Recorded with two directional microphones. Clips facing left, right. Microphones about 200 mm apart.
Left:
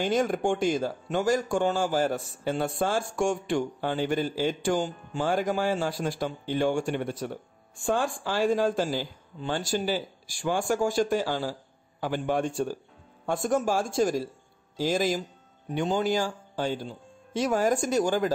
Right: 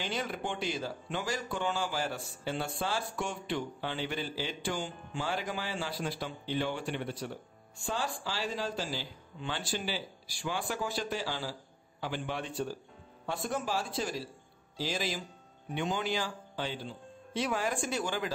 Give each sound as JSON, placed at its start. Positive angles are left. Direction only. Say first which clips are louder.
{"t": 0.0, "sound": "speech", "louder": "left 11 dB", "side_deg": 45}